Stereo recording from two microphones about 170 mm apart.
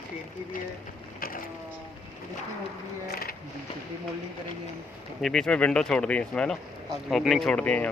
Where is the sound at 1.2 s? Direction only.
60° left (ahead or behind).